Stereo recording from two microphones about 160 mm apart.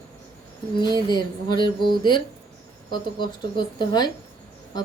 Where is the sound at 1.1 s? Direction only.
30° left (ahead or behind).